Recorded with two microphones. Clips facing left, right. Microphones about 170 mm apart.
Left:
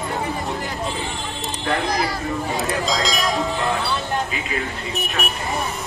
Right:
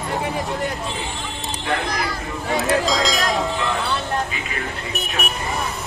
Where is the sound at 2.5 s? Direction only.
Centre (ahead or behind).